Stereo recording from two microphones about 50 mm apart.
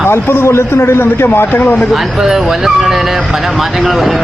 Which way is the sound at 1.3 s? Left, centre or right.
Left.